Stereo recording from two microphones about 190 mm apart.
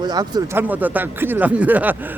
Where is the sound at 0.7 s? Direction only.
10° right (ahead or behind).